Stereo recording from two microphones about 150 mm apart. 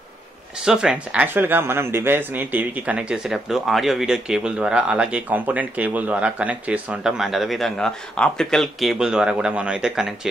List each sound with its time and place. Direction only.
0.6 s speech: 5° right (ahead or behind)